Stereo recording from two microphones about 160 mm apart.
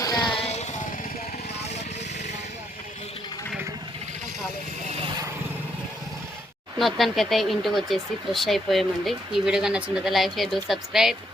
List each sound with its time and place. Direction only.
0.0 s music: 25° left (ahead or behind); by 0.8 s 45° left (ahead or behind)
6.7 s speech: centre (ahead or behind)